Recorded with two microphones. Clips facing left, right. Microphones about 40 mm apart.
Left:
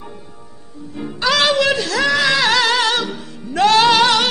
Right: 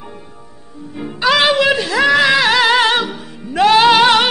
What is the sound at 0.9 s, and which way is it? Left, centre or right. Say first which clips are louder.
Music: right 3 dB; centre.